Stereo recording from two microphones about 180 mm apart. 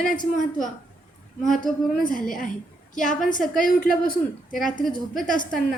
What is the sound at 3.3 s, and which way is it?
A woman's voice, 50° left (ahead or behind).